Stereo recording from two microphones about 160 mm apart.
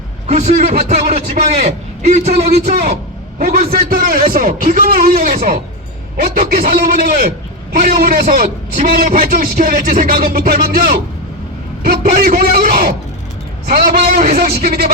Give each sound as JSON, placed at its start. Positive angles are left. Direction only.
{"t": 0.3, "sound": "a man's voice", "side_deg": -45}
{"t": 3.4, "sound": "a man's voice", "side_deg": -70}